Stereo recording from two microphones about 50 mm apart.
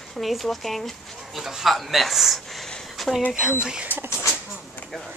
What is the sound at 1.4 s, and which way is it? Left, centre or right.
Speech, centre.